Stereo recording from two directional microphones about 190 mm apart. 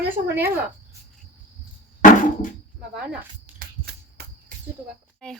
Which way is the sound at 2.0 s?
45° left (ahead or behind).